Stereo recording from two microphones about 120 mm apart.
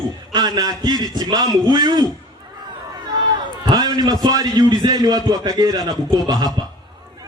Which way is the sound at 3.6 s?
35° right (ahead or behind).